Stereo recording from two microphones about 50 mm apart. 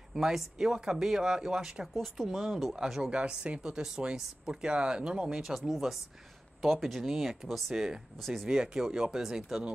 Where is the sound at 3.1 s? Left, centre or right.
Right; by 8.5 s centre.